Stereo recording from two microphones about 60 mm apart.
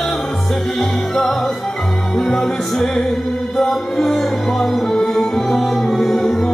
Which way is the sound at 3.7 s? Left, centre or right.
Centre.